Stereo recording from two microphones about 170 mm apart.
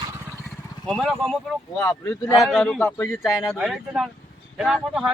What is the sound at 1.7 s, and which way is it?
Speech, 15° left (ahead or behind).